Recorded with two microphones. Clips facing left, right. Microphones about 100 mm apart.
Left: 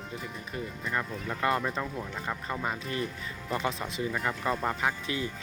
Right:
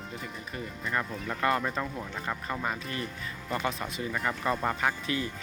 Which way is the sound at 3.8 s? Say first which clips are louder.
Left 1 dB; centre (ahead or behind).